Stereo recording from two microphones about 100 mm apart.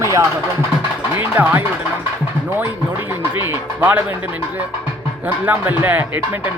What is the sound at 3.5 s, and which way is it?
Speech, 20° right (ahead or behind).